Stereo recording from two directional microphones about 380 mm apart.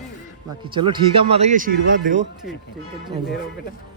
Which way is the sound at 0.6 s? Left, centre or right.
Centre.